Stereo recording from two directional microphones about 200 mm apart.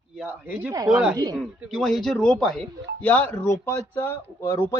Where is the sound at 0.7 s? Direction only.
20° right (ahead or behind).